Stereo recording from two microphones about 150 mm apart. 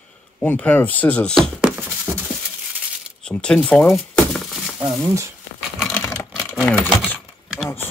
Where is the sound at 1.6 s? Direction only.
10° right (ahead or behind).